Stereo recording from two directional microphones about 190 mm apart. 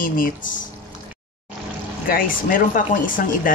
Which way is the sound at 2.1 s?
50° left (ahead or behind).